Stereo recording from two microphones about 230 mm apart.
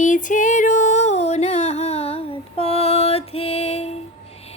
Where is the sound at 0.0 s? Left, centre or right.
Left.